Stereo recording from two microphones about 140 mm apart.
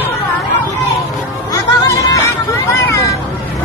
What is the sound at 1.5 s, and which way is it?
Music, 25° left (ahead or behind).